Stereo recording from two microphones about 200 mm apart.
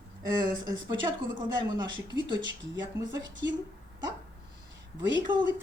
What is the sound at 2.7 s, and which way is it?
Speech, 65° right (ahead or behind).